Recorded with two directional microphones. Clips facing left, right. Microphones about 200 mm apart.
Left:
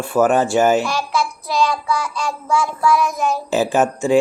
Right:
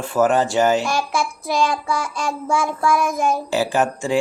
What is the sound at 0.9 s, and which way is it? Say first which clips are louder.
Child singing: left 1 dB; 50° right (ahead or behind).